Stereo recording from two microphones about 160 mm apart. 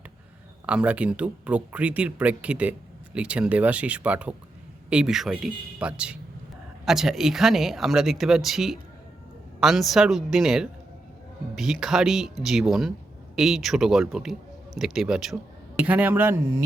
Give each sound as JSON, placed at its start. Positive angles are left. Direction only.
{"t": 0.6, "sound": "speech", "side_deg": -5}